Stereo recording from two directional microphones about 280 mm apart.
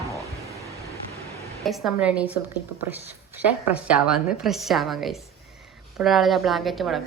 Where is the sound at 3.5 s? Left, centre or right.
Centre.